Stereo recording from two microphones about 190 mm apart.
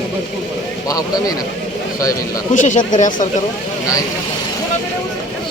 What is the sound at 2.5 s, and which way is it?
Speech, 40° left (ahead or behind).